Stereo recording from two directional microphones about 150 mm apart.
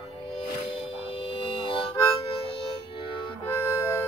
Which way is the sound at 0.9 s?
40° left (ahead or behind).